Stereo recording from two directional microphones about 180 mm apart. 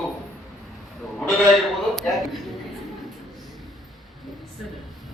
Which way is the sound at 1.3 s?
Centre (ahead or behind).